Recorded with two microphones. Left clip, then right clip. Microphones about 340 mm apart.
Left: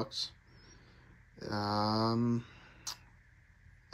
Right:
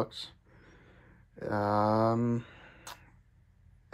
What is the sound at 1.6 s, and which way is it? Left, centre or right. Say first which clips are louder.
Speech: right 5 dB; centre.